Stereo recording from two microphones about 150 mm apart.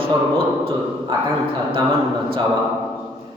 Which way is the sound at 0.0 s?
40° right (ahead or behind).